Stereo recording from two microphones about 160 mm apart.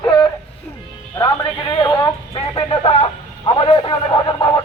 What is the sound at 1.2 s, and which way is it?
Speech, 30° left (ahead or behind).